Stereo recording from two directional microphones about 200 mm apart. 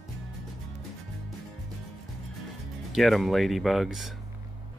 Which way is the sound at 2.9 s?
Centre (ahead or behind).